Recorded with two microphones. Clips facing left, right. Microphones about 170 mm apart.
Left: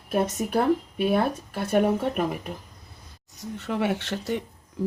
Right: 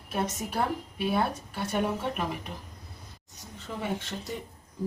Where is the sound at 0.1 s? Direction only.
55° left (ahead or behind).